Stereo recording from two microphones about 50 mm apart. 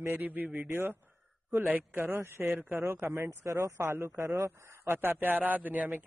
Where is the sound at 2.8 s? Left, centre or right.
Right.